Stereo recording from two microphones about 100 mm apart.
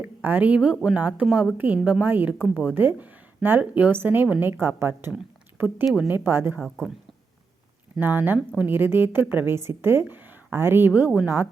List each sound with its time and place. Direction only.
0.0 s a woman's voice: 15° right (ahead or behind)
6.1 s a woman's voice: 20° right (ahead or behind)
6.6 s speech: centre (ahead or behind)
7.9 s a woman's voice: 20° right (ahead or behind)